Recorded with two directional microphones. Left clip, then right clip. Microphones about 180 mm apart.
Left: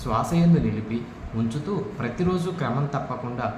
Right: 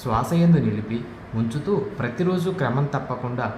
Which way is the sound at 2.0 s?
40° right (ahead or behind).